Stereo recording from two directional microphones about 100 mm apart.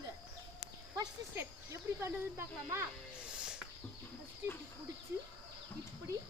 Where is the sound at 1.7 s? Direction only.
30° right (ahead or behind).